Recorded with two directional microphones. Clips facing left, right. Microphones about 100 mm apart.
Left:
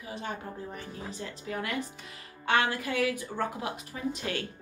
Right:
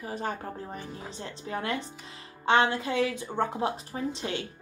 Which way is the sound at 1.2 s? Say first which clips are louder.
Right 3 dB; 30° right (ahead or behind).